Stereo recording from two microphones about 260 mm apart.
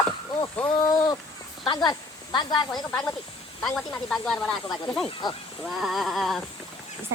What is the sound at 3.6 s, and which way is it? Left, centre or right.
Speech, centre.